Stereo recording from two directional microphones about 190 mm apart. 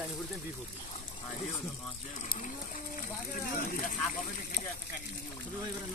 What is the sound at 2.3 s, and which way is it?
Speech, 45° left (ahead or behind).